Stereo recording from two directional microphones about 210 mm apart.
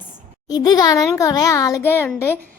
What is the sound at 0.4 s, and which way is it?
A woman's voice, 20° left (ahead or behind).